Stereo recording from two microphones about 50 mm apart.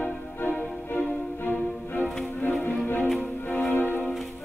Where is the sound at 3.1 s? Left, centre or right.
Left.